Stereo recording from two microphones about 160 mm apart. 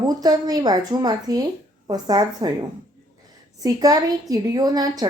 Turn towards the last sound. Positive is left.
turn(degrees=-25)  # may be behind; listen again after turning